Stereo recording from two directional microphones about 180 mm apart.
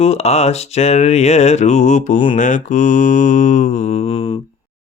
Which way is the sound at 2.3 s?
45° left (ahead or behind).